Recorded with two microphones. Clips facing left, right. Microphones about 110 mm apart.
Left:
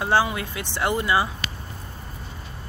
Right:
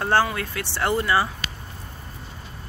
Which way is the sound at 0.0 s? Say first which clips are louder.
Even; 15° left (ahead or behind).